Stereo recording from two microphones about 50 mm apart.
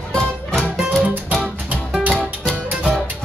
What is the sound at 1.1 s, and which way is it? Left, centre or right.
Music, right.